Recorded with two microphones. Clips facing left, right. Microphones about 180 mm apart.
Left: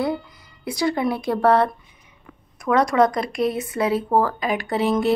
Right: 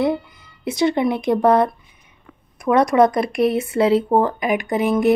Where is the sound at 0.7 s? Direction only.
25° right (ahead or behind).